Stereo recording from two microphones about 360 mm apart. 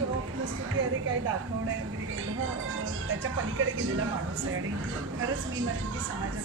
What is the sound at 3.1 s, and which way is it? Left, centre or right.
Speech, right.